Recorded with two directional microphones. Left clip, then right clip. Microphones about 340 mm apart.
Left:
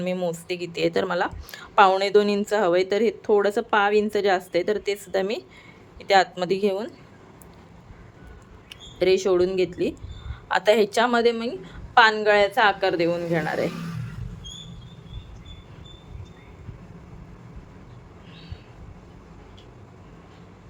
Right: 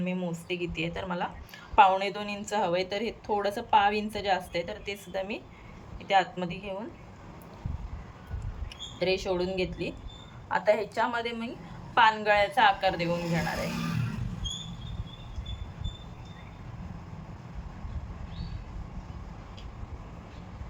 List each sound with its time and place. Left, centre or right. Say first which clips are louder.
0.0 s a woman's voice: left 8 dB; centre
9.0 s a woman's voice: left 9 dB; centre
10.5 s a woman's voice: left 7 dB; left